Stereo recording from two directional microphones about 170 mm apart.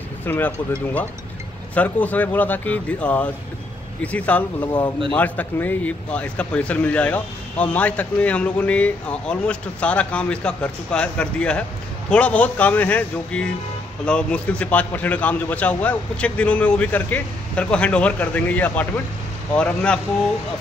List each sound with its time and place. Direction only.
0.2 s speech: 10° left (ahead or behind)
1.8 s speech: 10° left (ahead or behind)